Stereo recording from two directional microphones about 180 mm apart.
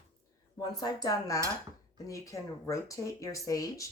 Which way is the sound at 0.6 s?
20° left (ahead or behind).